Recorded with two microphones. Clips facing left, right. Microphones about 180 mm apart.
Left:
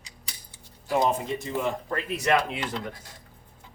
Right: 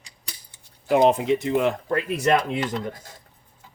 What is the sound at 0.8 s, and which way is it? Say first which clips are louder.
Speech: right 7 dB; 65° right (ahead or behind).